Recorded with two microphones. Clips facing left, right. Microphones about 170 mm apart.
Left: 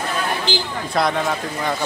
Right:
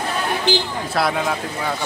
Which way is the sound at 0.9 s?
5° right (ahead or behind).